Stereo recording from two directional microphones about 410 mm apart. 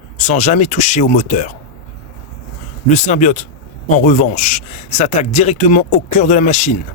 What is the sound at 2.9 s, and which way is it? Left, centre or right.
Speech, centre.